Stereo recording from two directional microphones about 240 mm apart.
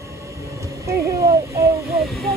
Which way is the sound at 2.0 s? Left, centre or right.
Centre.